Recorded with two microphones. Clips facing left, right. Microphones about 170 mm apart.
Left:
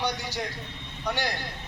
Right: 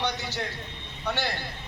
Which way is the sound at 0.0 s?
10° left (ahead or behind).